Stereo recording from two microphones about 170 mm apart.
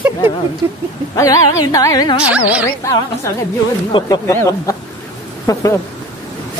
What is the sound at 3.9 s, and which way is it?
Speech, 30° left (ahead or behind).